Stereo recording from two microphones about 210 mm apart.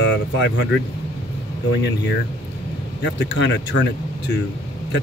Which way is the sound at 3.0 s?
55° left (ahead or behind).